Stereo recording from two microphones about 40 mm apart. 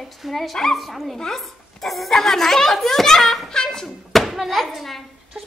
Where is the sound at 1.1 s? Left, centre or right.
Centre.